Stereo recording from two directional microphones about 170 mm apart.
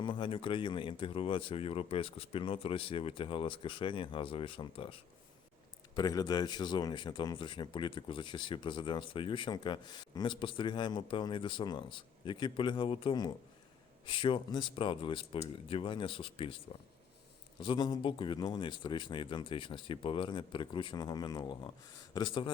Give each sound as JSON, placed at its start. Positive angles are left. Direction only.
{"t": 0.0, "sound": "speech", "side_deg": 30}
{"t": 17.6, "sound": "speech", "side_deg": 25}